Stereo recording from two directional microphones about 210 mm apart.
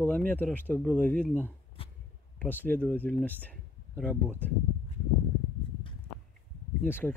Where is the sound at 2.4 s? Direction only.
10° left (ahead or behind).